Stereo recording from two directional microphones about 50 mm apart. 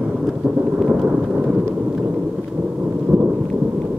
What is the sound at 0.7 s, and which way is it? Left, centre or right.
Thunder, centre.